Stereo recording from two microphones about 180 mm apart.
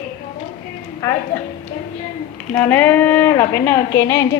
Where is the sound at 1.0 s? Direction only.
15° left (ahead or behind).